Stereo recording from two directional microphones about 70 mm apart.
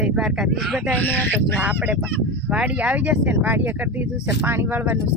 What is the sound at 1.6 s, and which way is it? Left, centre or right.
Speech, centre.